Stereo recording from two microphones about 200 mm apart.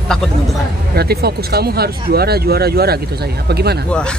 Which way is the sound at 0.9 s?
50° right (ahead or behind).